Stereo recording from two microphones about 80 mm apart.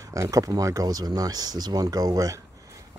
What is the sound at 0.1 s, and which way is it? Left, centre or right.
Speech, right.